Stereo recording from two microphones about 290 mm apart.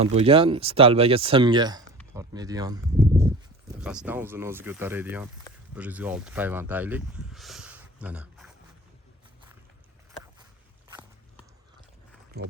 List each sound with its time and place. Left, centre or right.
0.0 s speech: right; by 8.5 s centre
10.8 s walk: centre
12.4 s speech: right